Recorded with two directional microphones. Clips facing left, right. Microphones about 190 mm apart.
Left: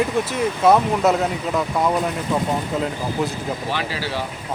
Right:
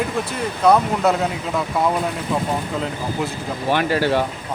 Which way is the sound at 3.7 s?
55° right (ahead or behind).